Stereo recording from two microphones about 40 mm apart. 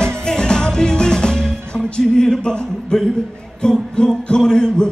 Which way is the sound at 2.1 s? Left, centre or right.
Centre.